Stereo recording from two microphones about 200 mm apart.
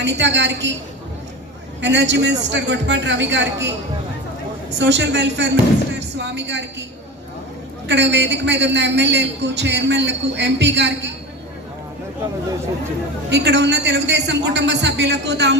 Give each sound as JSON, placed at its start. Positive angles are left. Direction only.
{"t": 0.0, "sound": "a man's voice", "side_deg": -65}
{"t": 1.8, "sound": "a man's voice", "side_deg": -60}
{"t": 4.8, "sound": "a man's voice", "side_deg": -60}
{"t": 7.9, "sound": "a man's voice", "side_deg": -60}
{"t": 13.3, "sound": "a man's voice", "side_deg": -60}